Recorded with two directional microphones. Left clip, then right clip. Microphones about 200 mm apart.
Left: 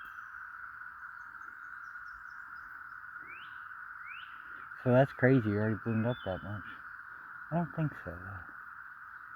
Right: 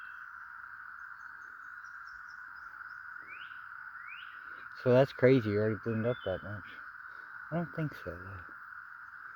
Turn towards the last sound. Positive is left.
turn(degrees=-25)  # may be behind; listen again after turning